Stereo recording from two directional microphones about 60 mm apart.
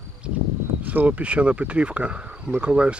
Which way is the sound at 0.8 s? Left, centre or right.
Right.